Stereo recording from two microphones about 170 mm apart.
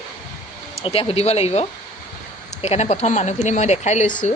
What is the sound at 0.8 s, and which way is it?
Speech, 35° left (ahead or behind).